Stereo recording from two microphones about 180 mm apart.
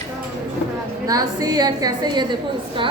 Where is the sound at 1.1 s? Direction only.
20° right (ahead or behind).